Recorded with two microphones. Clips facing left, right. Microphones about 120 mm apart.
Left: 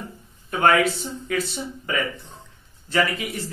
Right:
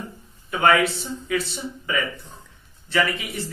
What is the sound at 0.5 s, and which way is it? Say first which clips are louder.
Speech: even; 45° left (ahead or behind).